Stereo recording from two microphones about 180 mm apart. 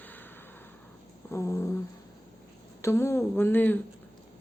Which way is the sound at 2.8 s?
15° left (ahead or behind).